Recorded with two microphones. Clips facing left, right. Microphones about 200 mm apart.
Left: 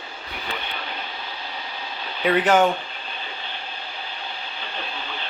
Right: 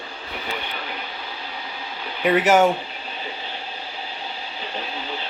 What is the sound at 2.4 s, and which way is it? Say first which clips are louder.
Speech: right 1 dB; 5° right (ahead or behind).